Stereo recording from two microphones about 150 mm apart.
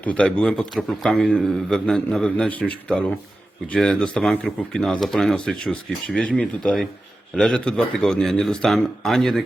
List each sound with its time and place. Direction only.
0.0 s a man's voice: 10° left (ahead or behind)